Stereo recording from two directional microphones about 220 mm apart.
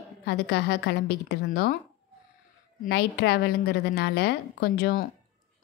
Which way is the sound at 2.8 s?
50° left (ahead or behind).